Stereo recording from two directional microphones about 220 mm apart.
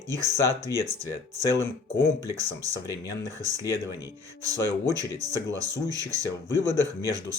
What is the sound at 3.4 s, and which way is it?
Speech, 15° right (ahead or behind).